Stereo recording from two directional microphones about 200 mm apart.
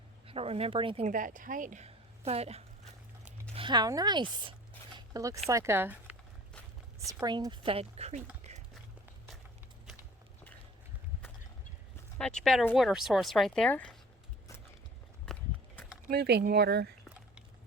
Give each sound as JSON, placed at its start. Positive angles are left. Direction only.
{"t": 0.3, "sound": "speech", "side_deg": -30}
{"t": 4.9, "sound": "a sound", "side_deg": -15}
{"t": 5.5, "sound": "speech", "side_deg": -15}
{"t": 12.1, "sound": "speech", "side_deg": 5}
{"t": 15.3, "sound": "walk", "side_deg": 5}
{"t": 16.0, "sound": "speech", "side_deg": -55}